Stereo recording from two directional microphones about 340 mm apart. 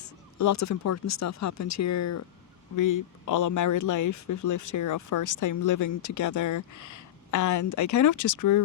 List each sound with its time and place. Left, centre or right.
0.0 s speech: left
2.7 s speech: left